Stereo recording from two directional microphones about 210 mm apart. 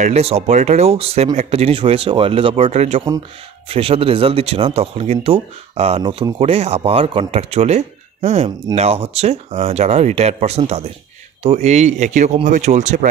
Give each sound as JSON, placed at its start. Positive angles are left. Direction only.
{"t": 0.0, "sound": "speech", "side_deg": -30}